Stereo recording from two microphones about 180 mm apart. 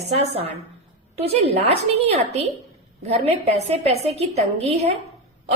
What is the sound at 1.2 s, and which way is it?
A woman's voice, 35° right (ahead or behind).